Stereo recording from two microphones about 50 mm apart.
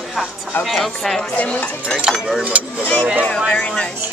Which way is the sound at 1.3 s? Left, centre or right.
Left.